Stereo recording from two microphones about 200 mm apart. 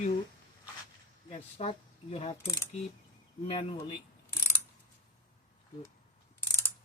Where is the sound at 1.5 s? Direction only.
30° left (ahead or behind).